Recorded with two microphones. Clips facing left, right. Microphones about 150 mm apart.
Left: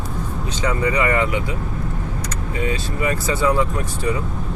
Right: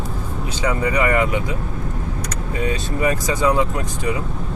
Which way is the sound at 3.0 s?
15° right (ahead or behind).